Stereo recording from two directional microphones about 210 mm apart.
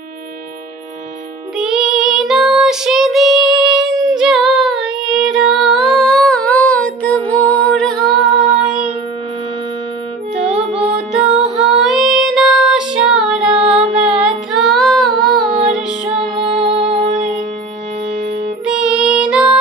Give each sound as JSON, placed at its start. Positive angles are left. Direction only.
{"t": 1.6, "sound": "child singing", "side_deg": 0}
{"t": 10.4, "sound": "music", "side_deg": -5}
{"t": 11.4, "sound": "child singing", "side_deg": 0}
{"t": 13.7, "sound": "music", "side_deg": -30}
{"t": 14.5, "sound": "child singing", "side_deg": 0}
{"t": 16.2, "sound": "music", "side_deg": -30}
{"t": 18.7, "sound": "music", "side_deg": -5}